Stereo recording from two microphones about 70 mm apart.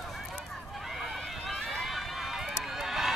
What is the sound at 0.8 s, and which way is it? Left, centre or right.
Run, centre.